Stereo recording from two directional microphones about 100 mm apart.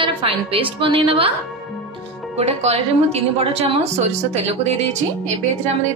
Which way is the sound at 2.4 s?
90° right.